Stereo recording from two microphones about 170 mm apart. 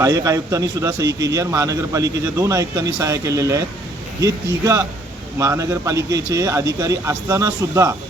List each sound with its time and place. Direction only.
0.0 s a man's voice: 20° right (ahead or behind)